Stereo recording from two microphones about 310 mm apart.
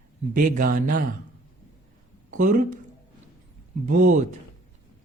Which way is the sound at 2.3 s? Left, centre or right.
Right.